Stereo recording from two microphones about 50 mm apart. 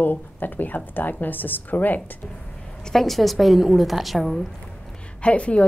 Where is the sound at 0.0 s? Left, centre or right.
Left.